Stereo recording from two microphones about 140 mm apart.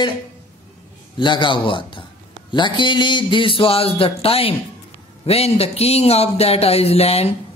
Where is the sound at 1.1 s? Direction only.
35° left (ahead or behind).